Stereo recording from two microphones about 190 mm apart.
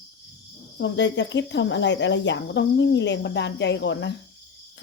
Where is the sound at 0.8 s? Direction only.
70° left (ahead or behind).